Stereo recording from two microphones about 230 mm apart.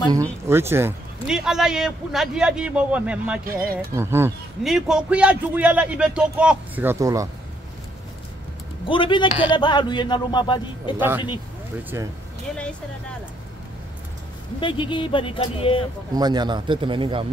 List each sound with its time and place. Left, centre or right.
0.1 s a man's voice: centre
3.4 s speech: right
3.9 s a man's voice: centre
8.8 s a man's voice: left
11.0 s speech: centre
14.6 s a man's voice: left
16.2 s speech: centre